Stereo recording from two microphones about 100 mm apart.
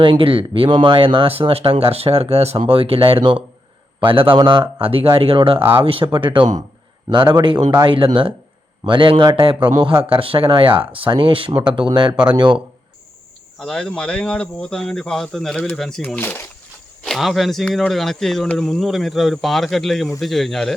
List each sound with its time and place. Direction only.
0.0 s a man's voice: 60° right (ahead or behind)
6.1 s a man's voice: 55° right (ahead or behind)
7.9 s a man's voice: 60° right (ahead or behind)
13.6 s speech: 5° left (ahead or behind)
17.0 s speech: centre (ahead or behind)